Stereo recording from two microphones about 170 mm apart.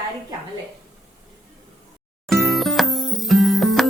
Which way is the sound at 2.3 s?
Centre (ahead or behind).